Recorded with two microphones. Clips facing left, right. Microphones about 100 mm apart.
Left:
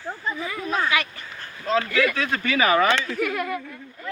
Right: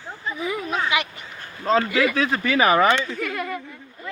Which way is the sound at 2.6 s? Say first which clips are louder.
Right 2 dB; 30° right (ahead or behind).